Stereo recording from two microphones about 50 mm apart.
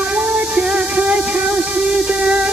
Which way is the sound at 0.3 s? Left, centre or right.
Right.